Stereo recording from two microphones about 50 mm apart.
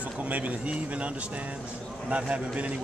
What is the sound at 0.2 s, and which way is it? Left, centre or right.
Speech, right.